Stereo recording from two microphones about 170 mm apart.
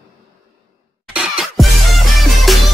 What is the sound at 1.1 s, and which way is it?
Music, centre (ahead or behind).